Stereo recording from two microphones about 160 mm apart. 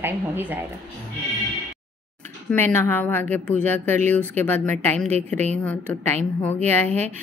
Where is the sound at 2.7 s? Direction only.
15° left (ahead or behind).